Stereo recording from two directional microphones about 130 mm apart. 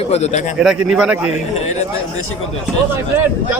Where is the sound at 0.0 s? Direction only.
55° left (ahead or behind).